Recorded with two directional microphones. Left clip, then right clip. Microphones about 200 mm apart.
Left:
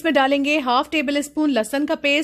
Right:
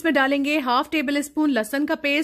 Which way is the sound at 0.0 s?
5° right (ahead or behind).